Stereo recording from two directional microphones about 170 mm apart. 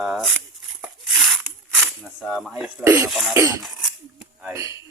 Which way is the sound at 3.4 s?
15° right (ahead or behind).